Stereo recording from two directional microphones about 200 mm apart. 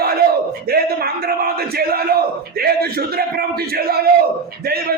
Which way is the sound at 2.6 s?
50° right (ahead or behind).